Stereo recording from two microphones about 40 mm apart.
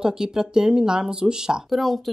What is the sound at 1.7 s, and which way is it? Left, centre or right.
Speech, centre.